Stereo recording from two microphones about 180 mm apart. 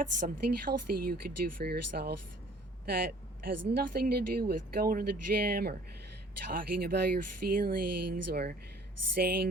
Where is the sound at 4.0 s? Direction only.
60° right (ahead or behind).